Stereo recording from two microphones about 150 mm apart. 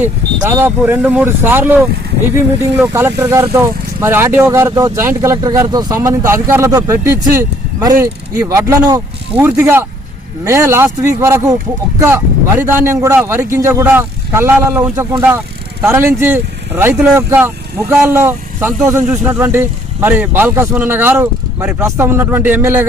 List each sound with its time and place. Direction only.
0.3 s speech: 25° right (ahead or behind)
0.8 s speech: 10° right (ahead or behind)
2.8 s speech: 15° right (ahead or behind)